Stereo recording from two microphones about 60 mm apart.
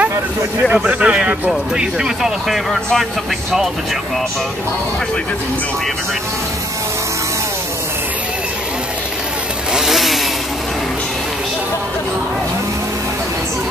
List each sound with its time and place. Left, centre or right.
0.8 s a sound: right
1.8 s speech: centre
9.8 s motorcycle: centre